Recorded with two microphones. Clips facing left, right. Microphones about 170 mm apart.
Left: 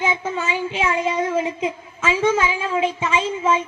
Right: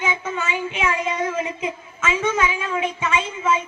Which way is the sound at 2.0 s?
30° left (ahead or behind).